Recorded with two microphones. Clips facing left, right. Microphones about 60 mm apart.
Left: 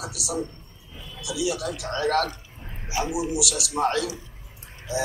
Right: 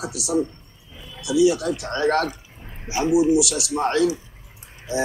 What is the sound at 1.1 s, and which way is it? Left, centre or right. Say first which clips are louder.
Speech: right 9 dB; right.